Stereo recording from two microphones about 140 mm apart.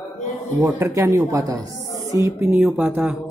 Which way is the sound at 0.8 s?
20° right (ahead or behind).